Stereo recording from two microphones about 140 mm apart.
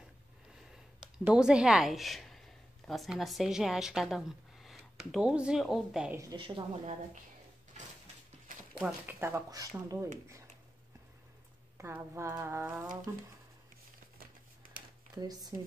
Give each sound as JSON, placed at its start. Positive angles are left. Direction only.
{"t": 1.2, "sound": "a woman's voice", "side_deg": -5}
{"t": 6.3, "sound": "a woman's voice", "side_deg": -35}
{"t": 8.7, "sound": "speech", "side_deg": -10}
{"t": 11.8, "sound": "speech", "side_deg": -15}
{"t": 15.1, "sound": "speech", "side_deg": -25}